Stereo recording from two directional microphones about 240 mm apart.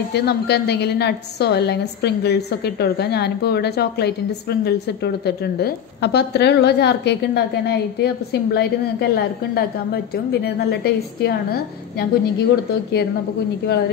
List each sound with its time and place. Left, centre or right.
0.1 s a woman's voice: left